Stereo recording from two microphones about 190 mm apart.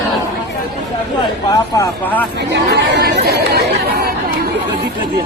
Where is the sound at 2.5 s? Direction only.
65° right (ahead or behind).